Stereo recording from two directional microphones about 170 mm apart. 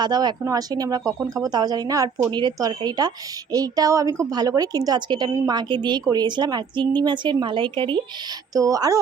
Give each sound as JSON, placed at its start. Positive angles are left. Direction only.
{"t": 0.0, "sound": "speech", "side_deg": -25}